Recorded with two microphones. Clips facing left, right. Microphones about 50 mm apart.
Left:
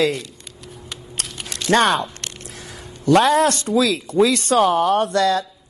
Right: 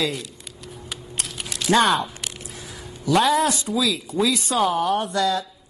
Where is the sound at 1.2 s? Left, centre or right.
Centre.